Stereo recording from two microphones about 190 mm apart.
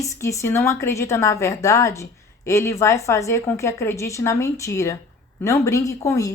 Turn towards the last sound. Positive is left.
turn(degrees=15)  # may be behind; listen again after turning